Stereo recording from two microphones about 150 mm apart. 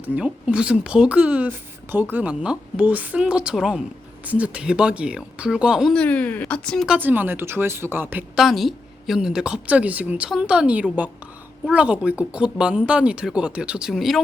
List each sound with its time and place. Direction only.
0.0 s speech: 10° right (ahead or behind)
5.9 s speech: 10° left (ahead or behind)
6.8 s speech: 10° right (ahead or behind)
8.4 s speech: centre (ahead or behind)